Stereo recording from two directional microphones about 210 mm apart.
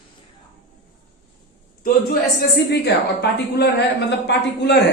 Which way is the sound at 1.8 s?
45° left (ahead or behind).